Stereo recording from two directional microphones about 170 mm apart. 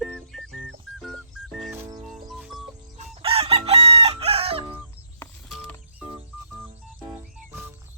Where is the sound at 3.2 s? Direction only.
35° right (ahead or behind).